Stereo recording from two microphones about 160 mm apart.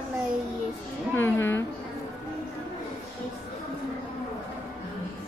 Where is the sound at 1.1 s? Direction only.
15° left (ahead or behind).